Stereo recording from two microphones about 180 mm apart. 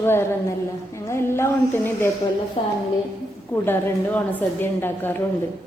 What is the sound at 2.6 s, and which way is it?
Speech, 30° left (ahead or behind).